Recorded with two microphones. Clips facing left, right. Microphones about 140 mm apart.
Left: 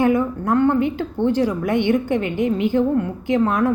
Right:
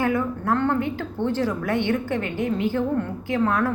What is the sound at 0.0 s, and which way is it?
A woman's voice, 15° left (ahead or behind).